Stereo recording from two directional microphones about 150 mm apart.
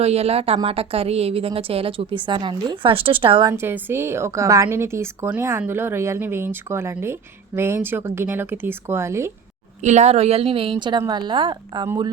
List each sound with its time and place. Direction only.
0.0 s a woman's voice: 45° right (ahead or behind)
3.5 s a woman's voice: 15° right (ahead or behind)
9.8 s a woman's voice: 50° right (ahead or behind); by 11.9 s 30° right (ahead or behind)